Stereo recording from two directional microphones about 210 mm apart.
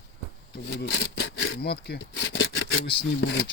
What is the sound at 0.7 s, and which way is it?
Speech, 55° left (ahead or behind).